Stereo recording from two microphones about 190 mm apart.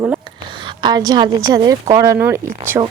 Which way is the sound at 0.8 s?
20° right (ahead or behind).